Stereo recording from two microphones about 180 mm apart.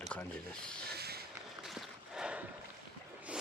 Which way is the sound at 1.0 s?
60° right (ahead or behind).